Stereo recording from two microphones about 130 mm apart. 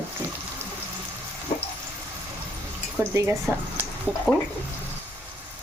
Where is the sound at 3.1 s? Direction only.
20° right (ahead or behind).